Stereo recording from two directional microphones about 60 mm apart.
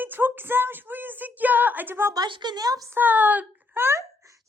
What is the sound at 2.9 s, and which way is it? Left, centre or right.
Speech, right.